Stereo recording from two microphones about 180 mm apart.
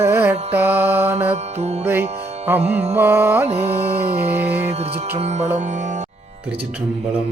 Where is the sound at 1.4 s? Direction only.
35° right (ahead or behind).